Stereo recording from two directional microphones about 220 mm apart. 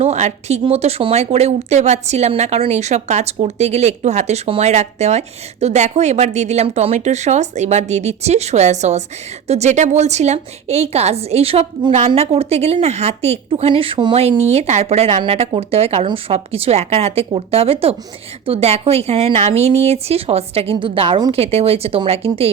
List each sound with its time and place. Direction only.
0.0 s a woman's voice: 30° right (ahead or behind)